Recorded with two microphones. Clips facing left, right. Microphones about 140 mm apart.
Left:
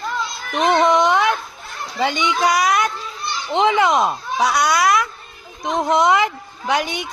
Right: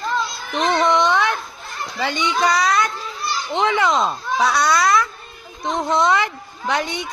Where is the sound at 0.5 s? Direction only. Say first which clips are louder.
Left 2 dB; 15° left (ahead or behind).